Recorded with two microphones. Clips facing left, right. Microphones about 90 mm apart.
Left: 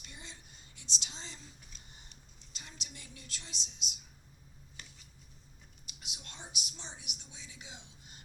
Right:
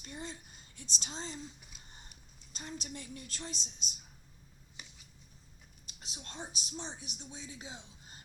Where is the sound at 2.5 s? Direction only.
40° right (ahead or behind).